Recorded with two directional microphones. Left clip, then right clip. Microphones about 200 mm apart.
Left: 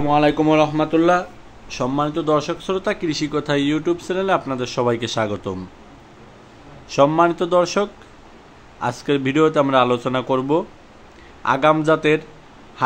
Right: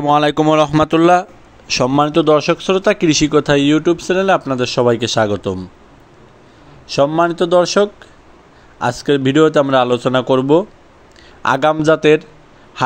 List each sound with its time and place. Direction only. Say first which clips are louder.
0.0 s speech: right 4 dB; 55° right (ahead or behind)
1.7 s a man's voice: right 8 dB; 45° right (ahead or behind); by 5.7 s 20° right (ahead or behind)
6.9 s a man's voice: right 1 dB; 20° right (ahead or behind)
12.8 s a sound: right 2 dB; 35° right (ahead or behind)